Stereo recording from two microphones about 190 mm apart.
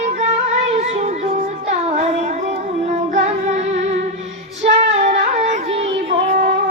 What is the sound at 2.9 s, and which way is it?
Child singing, 35° right (ahead or behind).